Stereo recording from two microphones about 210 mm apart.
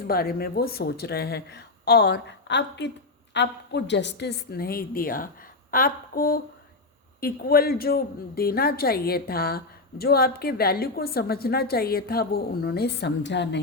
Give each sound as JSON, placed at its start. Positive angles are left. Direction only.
{"t": 0.1, "sound": "a woman's voice", "side_deg": 45}